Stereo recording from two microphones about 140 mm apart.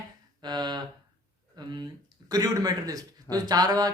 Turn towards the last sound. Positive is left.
turn(degrees=-30)  # may be behind; listen again after turning